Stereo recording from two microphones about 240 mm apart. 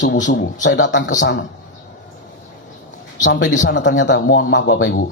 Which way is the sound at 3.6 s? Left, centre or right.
Left.